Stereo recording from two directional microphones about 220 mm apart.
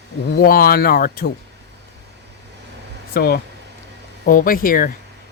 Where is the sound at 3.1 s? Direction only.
45° left (ahead or behind).